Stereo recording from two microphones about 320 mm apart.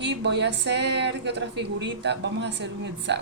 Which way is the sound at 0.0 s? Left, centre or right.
Right.